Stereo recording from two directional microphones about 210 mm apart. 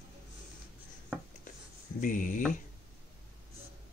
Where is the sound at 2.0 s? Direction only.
40° left (ahead or behind).